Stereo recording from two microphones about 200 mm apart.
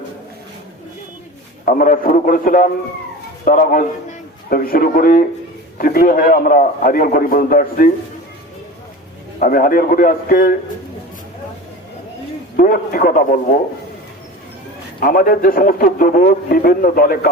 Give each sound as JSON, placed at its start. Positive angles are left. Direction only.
{"t": 1.6, "sound": "a man's voice", "side_deg": 45}
{"t": 9.4, "sound": "a man's voice", "side_deg": 45}
{"t": 12.5, "sound": "a man's voice", "side_deg": 45}
{"t": 15.0, "sound": "a man's voice", "side_deg": 45}